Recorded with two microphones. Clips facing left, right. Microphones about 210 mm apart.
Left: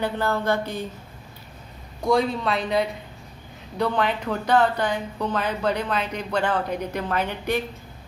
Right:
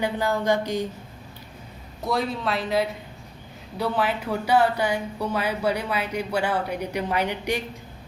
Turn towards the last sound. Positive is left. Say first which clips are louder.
# even
turn(degrees=-15)  # may be behind; listen again after turning